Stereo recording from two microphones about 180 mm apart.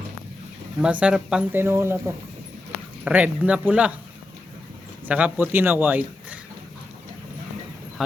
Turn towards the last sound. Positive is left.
turn(degrees=-10)  # may be behind; listen again after turning